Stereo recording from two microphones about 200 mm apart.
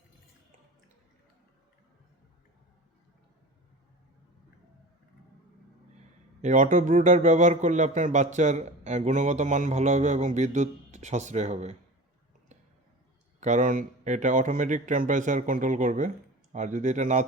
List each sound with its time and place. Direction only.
6.4 s a man's voice: 40° right (ahead or behind)
13.4 s a man's voice: 40° right (ahead or behind)